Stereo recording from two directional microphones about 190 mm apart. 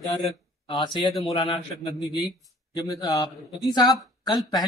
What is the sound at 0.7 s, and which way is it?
Speech, 25° left (ahead or behind).